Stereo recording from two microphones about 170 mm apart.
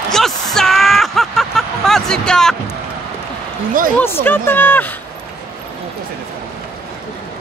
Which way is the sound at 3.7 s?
55° right (ahead or behind).